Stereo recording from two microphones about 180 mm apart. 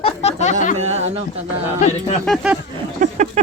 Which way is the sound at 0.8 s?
35° right (ahead or behind).